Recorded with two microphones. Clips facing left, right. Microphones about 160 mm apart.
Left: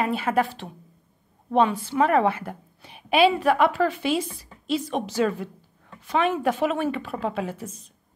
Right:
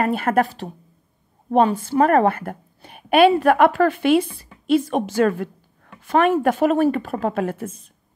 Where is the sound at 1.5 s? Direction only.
45° right (ahead or behind).